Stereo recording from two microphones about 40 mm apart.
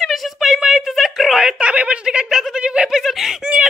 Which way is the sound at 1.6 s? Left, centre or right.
Right.